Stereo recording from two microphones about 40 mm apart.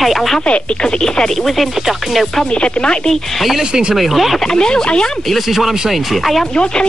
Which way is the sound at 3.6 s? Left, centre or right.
Right.